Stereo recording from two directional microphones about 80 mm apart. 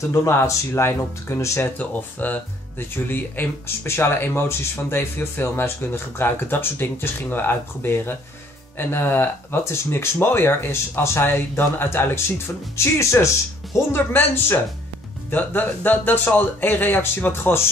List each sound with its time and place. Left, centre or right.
0.1 s speech: left
1.8 s speech: left